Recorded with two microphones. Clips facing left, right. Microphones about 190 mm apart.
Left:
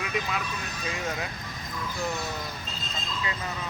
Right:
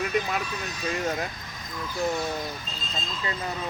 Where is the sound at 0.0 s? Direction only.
45° right (ahead or behind).